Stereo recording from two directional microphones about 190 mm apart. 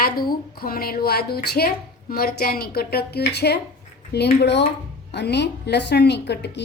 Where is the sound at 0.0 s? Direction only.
50° left (ahead or behind).